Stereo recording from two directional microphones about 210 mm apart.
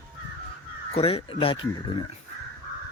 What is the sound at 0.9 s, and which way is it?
Speech, 30° left (ahead or behind).